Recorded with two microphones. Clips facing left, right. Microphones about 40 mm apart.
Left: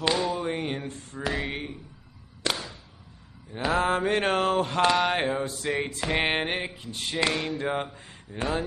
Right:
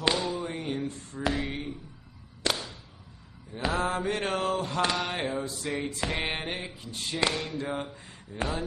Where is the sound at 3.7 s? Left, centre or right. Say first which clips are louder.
Left 6 dB; left.